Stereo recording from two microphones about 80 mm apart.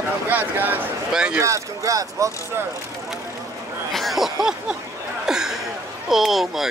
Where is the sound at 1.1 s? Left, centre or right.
Centre.